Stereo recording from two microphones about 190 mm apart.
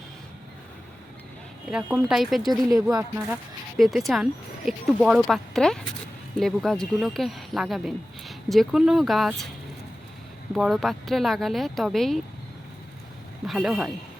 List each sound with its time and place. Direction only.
1.7 s speech: 5° right (ahead or behind)
2.9 s speech: 15° right (ahead or behind)
3.8 s speech: centre (ahead or behind)
10.5 s speech: centre (ahead or behind)
13.5 s speech: centre (ahead or behind)